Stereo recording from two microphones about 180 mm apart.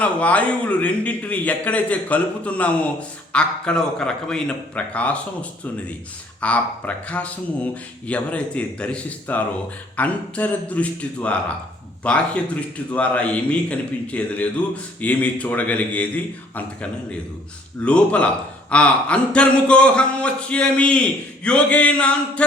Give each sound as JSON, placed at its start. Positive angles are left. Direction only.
{"t": 0.0, "sound": "a man's voice", "side_deg": 5}